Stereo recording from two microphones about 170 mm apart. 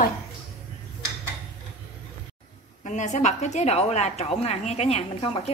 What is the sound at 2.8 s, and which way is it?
A woman's voice, 45° left (ahead or behind).